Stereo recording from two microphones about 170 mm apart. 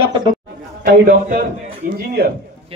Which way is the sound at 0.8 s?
65° right (ahead or behind).